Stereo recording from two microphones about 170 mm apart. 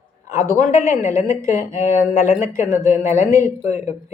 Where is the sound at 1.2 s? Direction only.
15° right (ahead or behind).